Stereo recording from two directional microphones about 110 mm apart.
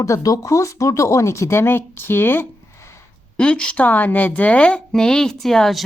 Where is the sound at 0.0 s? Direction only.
30° left (ahead or behind).